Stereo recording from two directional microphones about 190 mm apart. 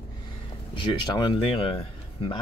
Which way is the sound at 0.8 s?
25° left (ahead or behind).